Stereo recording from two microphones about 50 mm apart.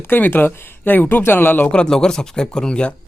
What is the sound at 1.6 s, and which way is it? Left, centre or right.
A man's voice, left.